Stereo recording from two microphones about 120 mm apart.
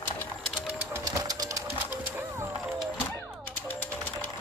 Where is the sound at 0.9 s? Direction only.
25° right (ahead or behind).